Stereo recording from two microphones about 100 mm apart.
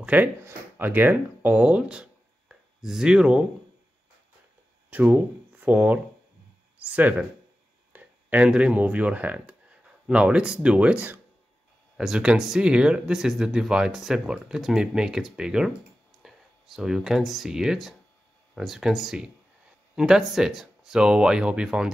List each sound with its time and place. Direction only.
0.0 s speech: 15° right (ahead or behind)
4.9 s speech: 15° right (ahead or behind)